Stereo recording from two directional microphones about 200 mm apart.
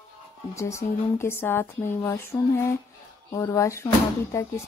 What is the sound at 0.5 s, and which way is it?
Speech, 15° left (ahead or behind).